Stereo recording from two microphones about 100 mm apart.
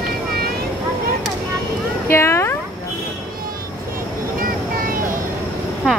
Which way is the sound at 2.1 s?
25° left (ahead or behind).